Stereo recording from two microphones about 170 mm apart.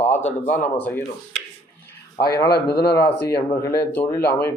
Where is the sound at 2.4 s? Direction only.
70° left (ahead or behind).